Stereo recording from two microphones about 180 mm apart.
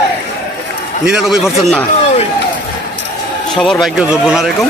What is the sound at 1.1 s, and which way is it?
Speech, centre (ahead or behind).